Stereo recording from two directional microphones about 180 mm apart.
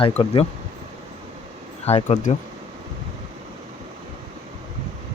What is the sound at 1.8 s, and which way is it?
Speech, 35° left (ahead or behind).